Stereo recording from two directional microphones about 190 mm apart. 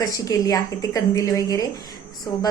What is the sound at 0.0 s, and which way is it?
A woman's voice, 20° left (ahead or behind).